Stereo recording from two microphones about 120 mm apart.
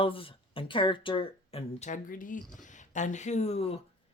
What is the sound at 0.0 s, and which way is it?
Speech, 50° left (ahead or behind).